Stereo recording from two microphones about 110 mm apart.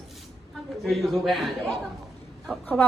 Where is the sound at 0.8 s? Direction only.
Centre (ahead or behind).